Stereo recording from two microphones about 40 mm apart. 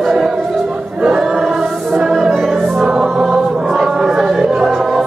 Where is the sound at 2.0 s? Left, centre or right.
Centre.